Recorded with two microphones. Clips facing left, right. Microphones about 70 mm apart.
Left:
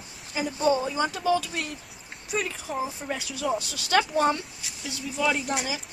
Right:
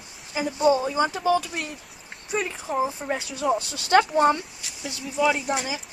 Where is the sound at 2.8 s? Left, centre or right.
Right.